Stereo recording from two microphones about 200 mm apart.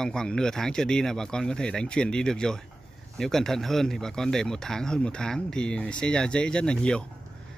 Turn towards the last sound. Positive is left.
turn(degrees=5)  # may be behind; listen again after turning